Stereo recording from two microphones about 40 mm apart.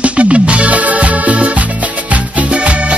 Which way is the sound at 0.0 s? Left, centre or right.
Right.